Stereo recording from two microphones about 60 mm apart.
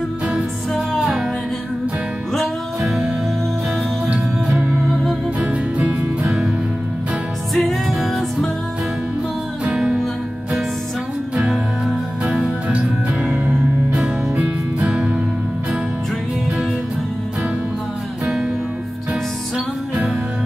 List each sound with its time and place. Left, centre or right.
0.7 s music: centre
2.3 s music: centre
5.4 s music: right
7.5 s music: centre
11.3 s music: centre
13.2 s music: right
14.4 s music: centre